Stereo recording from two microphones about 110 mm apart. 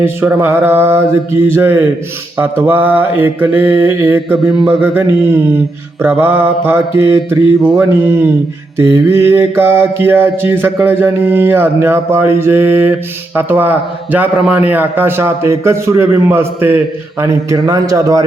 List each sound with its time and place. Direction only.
0.0 s a man's voice: 20° right (ahead or behind)